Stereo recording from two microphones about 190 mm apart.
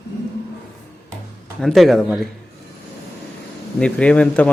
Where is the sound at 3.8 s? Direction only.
5° left (ahead or behind).